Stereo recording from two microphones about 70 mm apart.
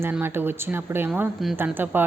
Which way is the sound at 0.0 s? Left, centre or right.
Right.